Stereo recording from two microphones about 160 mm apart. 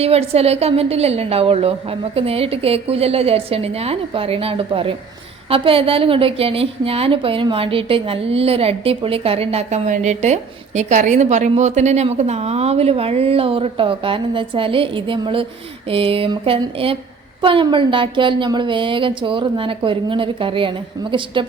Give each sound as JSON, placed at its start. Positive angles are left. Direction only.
{"t": 0.0, "sound": "a woman's voice", "side_deg": -40}